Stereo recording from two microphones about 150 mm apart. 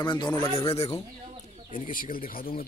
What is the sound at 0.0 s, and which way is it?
Speech, 30° left (ahead or behind).